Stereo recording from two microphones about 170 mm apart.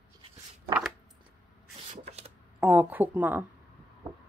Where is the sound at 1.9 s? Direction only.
40° right (ahead or behind).